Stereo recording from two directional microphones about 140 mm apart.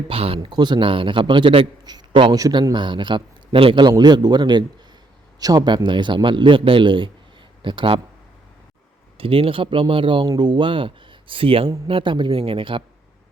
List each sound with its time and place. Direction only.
0.1 s a man's voice: 40° right (ahead or behind)
9.1 s a man's voice: 40° right (ahead or behind)